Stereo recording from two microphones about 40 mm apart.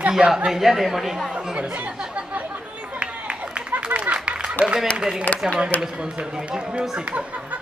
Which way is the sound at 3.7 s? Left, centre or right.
Right.